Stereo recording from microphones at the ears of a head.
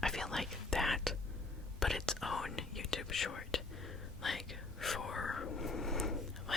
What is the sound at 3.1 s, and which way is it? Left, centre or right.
Whispering, left.